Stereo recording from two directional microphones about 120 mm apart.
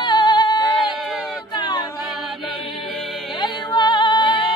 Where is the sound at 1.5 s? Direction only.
35° left (ahead or behind).